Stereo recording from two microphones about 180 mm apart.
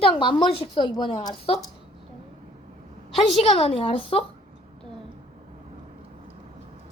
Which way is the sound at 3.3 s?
35° left (ahead or behind).